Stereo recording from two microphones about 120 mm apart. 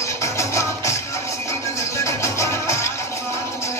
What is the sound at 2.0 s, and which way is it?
Music, 25° left (ahead or behind).